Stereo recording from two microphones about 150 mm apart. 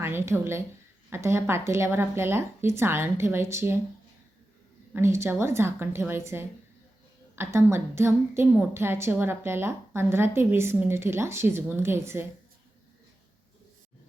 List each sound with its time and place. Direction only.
0.0 s a woman's voice: 15° right (ahead or behind)
4.9 s a woman's voice: 15° right (ahead or behind)